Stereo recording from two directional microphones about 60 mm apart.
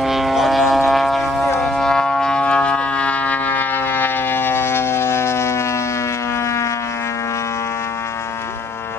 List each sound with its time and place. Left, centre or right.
0.0 s vehicle: centre
0.8 s a sound: centre
1.6 s music: centre; by 5.6 s left